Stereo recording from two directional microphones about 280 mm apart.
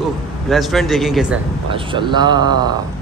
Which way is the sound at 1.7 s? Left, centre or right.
Centre.